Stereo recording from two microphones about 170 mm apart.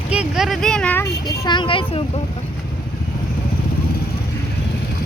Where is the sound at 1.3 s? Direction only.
25° left (ahead or behind).